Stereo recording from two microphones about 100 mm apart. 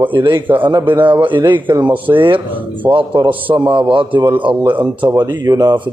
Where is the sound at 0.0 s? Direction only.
50° right (ahead or behind).